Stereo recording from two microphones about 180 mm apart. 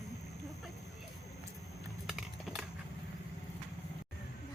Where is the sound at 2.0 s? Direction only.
Centre (ahead or behind).